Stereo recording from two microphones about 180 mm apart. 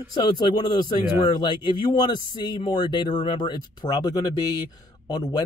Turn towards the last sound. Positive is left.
turn(degrees=20)  # may be behind; listen again after turning